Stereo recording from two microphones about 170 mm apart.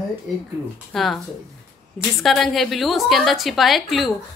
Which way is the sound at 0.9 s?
Centre (ahead or behind).